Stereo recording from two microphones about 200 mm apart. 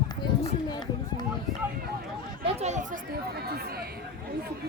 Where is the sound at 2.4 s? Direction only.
35° right (ahead or behind); by 3.9 s 50° right (ahead or behind).